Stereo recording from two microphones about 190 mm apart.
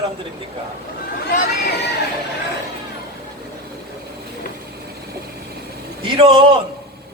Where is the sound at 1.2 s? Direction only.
45° left (ahead or behind).